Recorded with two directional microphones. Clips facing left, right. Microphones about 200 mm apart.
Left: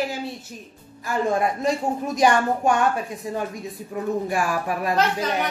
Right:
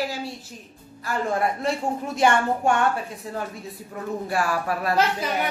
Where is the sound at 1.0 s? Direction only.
15° left (ahead or behind).